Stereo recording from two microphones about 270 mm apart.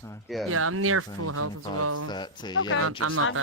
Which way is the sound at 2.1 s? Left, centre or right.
Centre.